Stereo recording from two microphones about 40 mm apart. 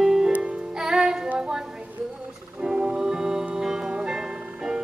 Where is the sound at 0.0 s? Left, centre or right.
Centre.